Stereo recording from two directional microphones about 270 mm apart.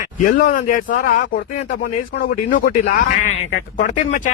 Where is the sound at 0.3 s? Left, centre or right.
Left.